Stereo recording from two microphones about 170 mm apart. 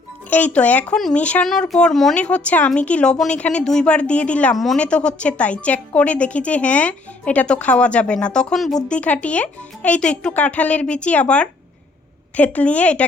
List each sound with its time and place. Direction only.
0.3 s speech: 10° left (ahead or behind)